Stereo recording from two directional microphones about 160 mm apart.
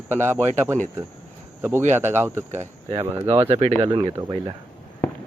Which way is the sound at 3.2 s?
35° right (ahead or behind).